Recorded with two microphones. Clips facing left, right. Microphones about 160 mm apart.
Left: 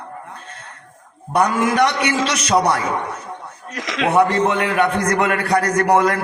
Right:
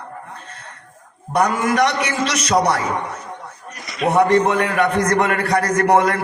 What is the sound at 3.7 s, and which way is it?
Speech, 90° left.